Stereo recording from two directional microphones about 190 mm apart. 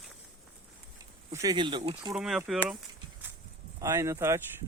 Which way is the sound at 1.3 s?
20° right (ahead or behind).